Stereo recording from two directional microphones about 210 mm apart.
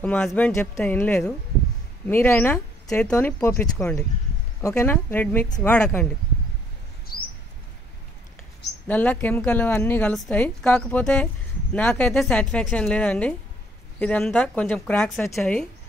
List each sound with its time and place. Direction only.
0.0 s a woman's voice: 5° left (ahead or behind)
7.1 s a sound: 45° left (ahead or behind)
8.8 s a woman's voice: 10° left (ahead or behind)